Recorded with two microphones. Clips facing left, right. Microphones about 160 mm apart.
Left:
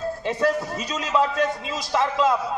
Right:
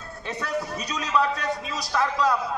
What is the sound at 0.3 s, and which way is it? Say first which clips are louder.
A man's voice: left 5 dB; 25° left (ahead or behind).